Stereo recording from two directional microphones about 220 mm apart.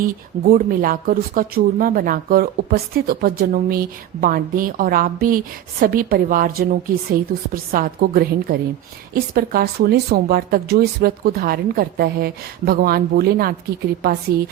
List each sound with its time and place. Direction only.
0.0 s speech: 40° right (ahead or behind)